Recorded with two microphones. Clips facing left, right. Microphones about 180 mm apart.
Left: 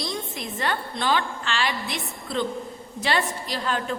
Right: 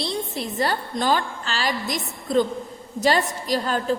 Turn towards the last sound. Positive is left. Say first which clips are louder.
# right 5 dB
turn(degrees=-40)  # may be behind; listen again after turning